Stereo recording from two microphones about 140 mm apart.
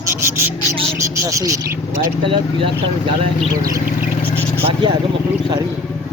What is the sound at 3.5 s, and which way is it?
Speech, 25° right (ahead or behind).